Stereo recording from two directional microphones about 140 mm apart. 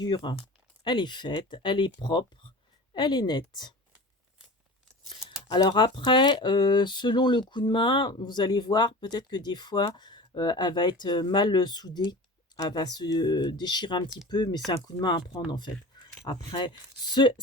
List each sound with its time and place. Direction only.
0.0 s speech: 35° left (ahead or behind)
5.5 s speech: 35° left (ahead or behind)